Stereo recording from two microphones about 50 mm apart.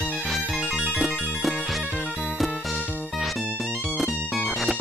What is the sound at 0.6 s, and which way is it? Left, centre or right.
Music, right.